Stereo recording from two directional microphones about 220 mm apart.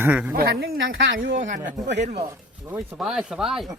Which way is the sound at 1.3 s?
35° right (ahead or behind).